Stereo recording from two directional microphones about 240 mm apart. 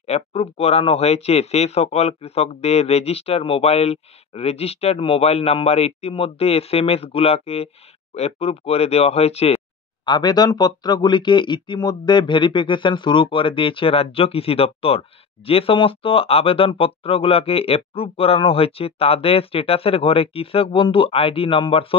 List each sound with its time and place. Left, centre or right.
0.0 s speech: left